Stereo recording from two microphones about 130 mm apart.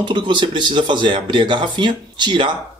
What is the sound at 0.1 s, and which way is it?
Speech, 35° right (ahead or behind).